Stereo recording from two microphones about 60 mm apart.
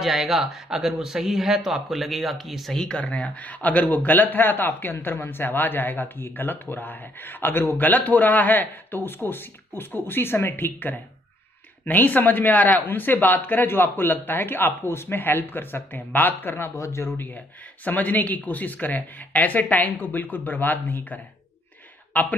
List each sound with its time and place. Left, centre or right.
0.0 s a man's voice: centre
3.0 s a man's voice: left
16.7 s a man's voice: left
17.8 s a man's voice: left